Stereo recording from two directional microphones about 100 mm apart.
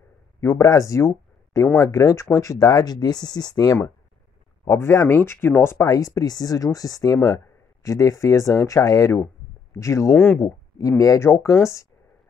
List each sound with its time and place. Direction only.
0.4 s speech: 30° left (ahead or behind)
4.6 s speech: 25° left (ahead or behind)
10.1 s speech: 15° left (ahead or behind)
10.8 s speech: 35° left (ahead or behind)